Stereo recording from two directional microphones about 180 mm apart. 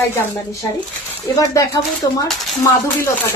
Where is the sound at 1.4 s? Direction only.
20° left (ahead or behind).